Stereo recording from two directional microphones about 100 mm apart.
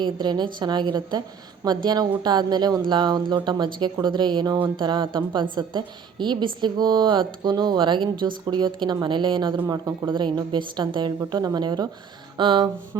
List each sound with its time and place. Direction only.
0.0 s a woman's voice: 50° right (ahead or behind)
9.6 s a woman's voice: 40° right (ahead or behind)
10.1 s a woman's voice: 55° right (ahead or behind)